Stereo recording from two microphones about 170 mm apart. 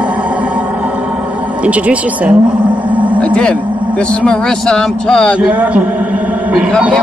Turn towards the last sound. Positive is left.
turn(degrees=-5)  # may be behind; listen again after turning